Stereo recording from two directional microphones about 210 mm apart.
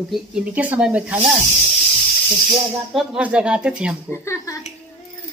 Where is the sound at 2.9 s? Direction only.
5° right (ahead or behind).